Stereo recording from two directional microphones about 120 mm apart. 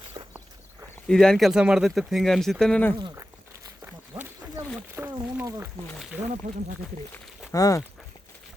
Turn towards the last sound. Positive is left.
turn(degrees=30)  # may be behind; listen again after turning